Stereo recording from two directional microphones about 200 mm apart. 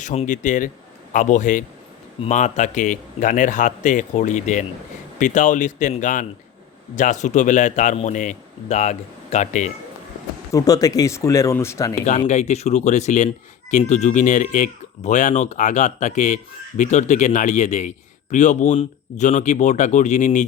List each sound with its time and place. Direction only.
0.0 s speech: 35° left (ahead or behind)
10.5 s speech: 15° left (ahead or behind)
12.3 s speech: 35° left (ahead or behind)